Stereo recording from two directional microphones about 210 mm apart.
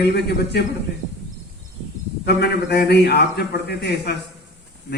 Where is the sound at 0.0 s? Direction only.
50° left (ahead or behind).